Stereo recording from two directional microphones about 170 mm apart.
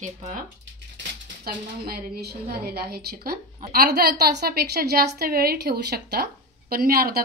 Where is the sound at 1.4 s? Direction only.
60° right (ahead or behind).